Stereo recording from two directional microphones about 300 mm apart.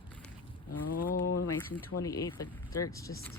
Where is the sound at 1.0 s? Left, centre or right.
Left.